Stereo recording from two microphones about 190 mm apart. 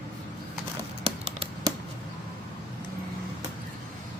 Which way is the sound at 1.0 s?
30° right (ahead or behind).